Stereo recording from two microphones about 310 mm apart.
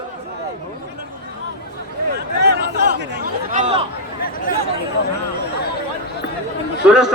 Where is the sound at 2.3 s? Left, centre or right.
Right.